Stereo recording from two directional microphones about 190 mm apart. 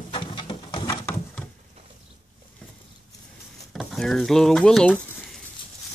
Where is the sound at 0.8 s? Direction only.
15° left (ahead or behind).